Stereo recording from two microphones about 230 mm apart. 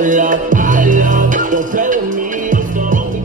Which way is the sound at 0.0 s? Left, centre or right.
Right.